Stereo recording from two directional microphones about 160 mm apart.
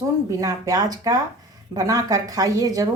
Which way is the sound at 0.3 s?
20° right (ahead or behind).